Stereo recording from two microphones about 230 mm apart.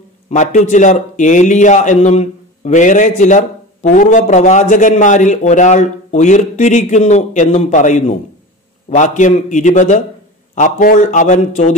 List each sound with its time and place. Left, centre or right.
0.3 s a man's voice: left